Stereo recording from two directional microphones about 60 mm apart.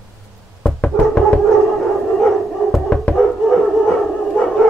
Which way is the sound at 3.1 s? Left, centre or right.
Centre.